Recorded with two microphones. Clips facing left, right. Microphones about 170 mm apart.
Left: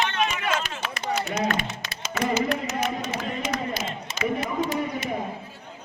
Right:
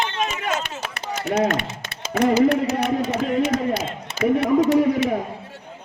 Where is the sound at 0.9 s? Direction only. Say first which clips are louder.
Right 5 dB; 60° right (ahead or behind).